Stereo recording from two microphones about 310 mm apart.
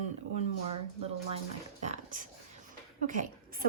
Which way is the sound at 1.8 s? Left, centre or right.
Right.